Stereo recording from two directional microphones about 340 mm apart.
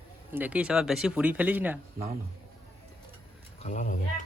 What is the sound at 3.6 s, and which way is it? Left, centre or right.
Speech, left.